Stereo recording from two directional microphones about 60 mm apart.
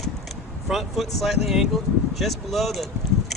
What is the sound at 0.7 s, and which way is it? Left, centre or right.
Speech, centre.